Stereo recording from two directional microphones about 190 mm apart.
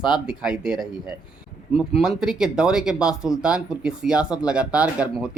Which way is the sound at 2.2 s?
5° right (ahead or behind).